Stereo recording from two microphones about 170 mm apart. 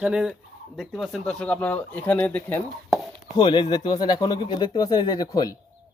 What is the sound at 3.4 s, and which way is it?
Speech, 25° left (ahead or behind).